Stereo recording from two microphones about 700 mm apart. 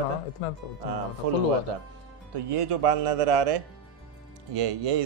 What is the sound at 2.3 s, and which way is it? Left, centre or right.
Speech, right.